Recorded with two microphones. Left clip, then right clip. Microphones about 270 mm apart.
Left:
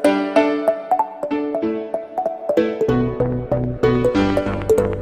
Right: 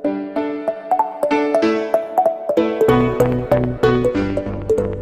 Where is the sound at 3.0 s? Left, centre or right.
Right.